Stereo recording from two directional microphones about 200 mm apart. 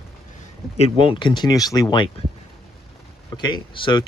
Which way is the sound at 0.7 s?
30° left (ahead or behind).